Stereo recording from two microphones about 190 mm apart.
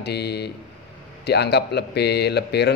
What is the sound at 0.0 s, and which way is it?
Speech, 60° left (ahead or behind).